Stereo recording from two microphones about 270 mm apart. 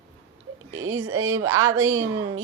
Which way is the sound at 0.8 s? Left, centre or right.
Right.